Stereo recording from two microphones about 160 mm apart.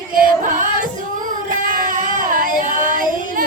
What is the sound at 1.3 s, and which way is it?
Child singing, 60° right (ahead or behind).